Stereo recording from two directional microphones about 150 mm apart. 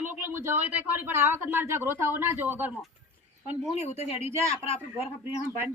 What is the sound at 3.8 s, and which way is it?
Speech, 45° left (ahead or behind).